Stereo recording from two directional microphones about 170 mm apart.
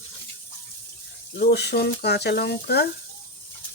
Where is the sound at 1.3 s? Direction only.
80° left.